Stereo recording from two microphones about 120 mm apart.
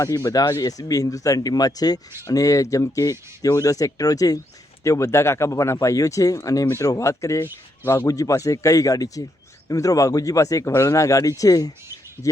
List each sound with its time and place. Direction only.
0.0 s speech: 25° left (ahead or behind)